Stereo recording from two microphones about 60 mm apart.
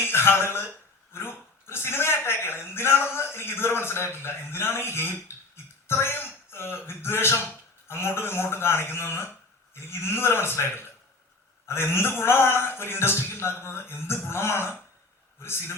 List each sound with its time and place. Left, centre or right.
0.0 s speech: left